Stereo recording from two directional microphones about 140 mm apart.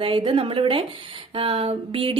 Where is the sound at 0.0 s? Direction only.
40° right (ahead or behind).